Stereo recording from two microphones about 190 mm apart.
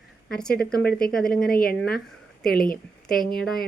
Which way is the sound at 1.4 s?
50° left (ahead or behind).